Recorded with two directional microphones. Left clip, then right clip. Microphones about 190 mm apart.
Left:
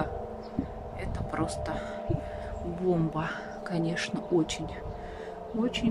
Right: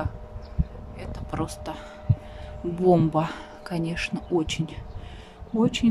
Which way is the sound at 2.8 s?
25° right (ahead or behind).